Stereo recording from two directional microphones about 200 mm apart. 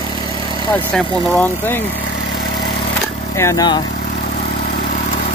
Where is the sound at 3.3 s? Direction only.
15° left (ahead or behind).